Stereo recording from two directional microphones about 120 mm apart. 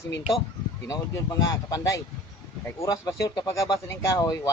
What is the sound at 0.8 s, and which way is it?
Speech, 30° left (ahead or behind).